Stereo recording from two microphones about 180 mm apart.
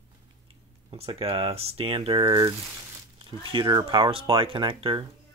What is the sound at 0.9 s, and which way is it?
Speech, 30° right (ahead or behind).